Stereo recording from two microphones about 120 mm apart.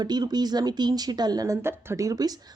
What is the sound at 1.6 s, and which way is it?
Speech, 20° right (ahead or behind).